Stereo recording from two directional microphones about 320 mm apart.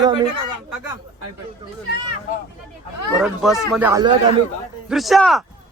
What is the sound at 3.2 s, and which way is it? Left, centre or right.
Speech, centre.